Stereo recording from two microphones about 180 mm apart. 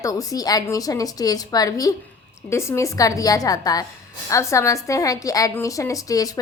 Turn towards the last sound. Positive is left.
turn(degrees=20)  # may be behind; listen again after turning